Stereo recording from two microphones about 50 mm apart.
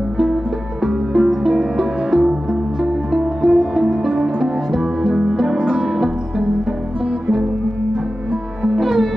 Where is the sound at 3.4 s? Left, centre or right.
Centre.